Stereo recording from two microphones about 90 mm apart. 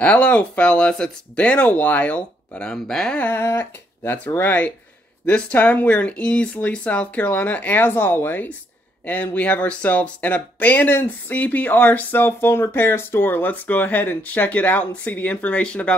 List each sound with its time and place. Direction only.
0.0 s speech: 15° left (ahead or behind)
3.3 s speech: 25° left (ahead or behind)